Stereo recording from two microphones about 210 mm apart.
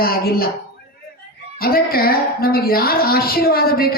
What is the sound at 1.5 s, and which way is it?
A woman's voice, 45° left (ahead or behind).